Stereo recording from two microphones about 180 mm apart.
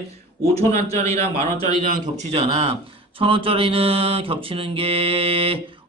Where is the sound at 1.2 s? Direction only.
25° left (ahead or behind).